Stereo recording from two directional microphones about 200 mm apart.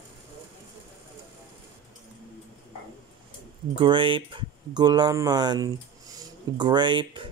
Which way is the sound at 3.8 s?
25° right (ahead or behind).